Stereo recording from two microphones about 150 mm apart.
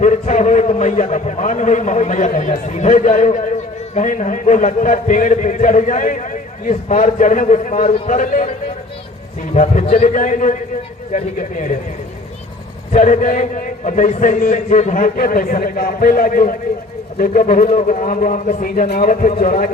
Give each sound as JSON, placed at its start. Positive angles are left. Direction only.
{"t": 0.0, "sound": "a man's voice", "side_deg": 55}
{"t": 9.8, "sound": "a man's voice", "side_deg": 45}
{"t": 10.2, "sound": "a man's voice", "side_deg": 60}
{"t": 12.9, "sound": "a man's voice", "side_deg": 60}
{"t": 17.7, "sound": "a man's voice", "side_deg": 55}